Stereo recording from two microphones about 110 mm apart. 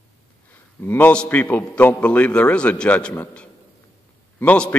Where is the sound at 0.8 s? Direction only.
20° left (ahead or behind).